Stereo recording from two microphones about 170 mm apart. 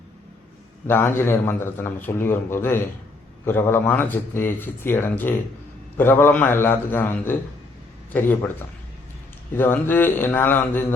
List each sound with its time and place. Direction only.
0.9 s a man's voice: 15° left (ahead or behind)
9.6 s a man's voice: 10° left (ahead or behind)